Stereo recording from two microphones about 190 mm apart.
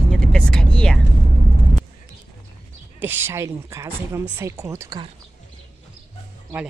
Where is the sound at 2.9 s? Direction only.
10° right (ahead or behind).